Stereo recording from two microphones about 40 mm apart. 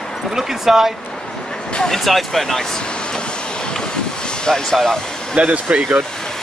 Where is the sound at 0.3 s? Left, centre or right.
Centre.